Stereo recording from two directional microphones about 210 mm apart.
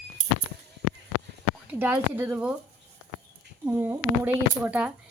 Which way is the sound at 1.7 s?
10° right (ahead or behind).